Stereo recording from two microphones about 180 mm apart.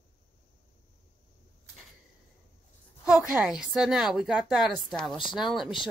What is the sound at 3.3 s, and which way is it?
A woman's voice, 5° right (ahead or behind).